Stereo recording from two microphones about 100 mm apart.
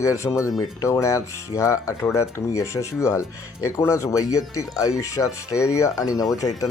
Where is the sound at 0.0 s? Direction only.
30° left (ahead or behind).